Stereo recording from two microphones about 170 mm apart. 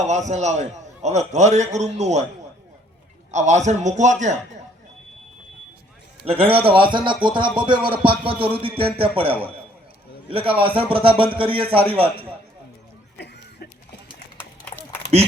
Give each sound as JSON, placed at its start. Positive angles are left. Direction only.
{"t": 0.0, "sound": "a man's voice", "side_deg": -40}
{"t": 3.3, "sound": "a man's voice", "side_deg": -40}
{"t": 6.2, "sound": "a man's voice", "side_deg": -35}
{"t": 13.1, "sound": "a sound", "side_deg": 80}
{"t": 14.3, "sound": "run", "side_deg": 10}